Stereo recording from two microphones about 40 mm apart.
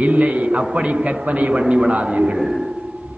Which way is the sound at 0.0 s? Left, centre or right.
Right.